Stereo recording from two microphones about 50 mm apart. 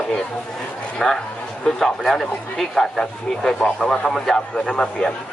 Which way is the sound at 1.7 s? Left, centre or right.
Centre.